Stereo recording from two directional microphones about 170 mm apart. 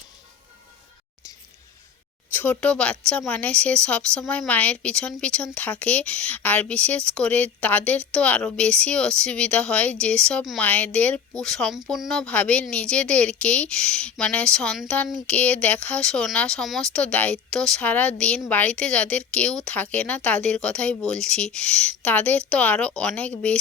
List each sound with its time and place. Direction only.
2.3 s a woman's voice: 10° left (ahead or behind)